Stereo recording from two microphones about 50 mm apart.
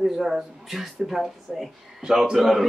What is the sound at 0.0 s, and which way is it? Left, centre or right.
Speech, centre.